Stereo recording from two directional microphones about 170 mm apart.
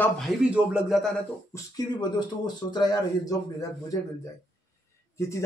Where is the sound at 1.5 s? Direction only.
15° left (ahead or behind).